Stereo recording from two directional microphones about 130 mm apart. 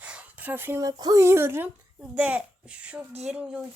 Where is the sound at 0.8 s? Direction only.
30° right (ahead or behind).